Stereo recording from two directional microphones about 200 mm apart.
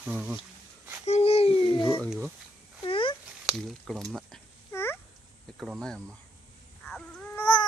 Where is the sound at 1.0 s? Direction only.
30° left (ahead or behind).